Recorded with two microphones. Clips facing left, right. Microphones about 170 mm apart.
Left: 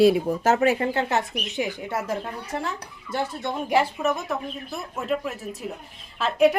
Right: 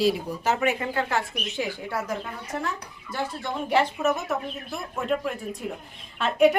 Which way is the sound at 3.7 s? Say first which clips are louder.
Left 1 dB; 10° left (ahead or behind).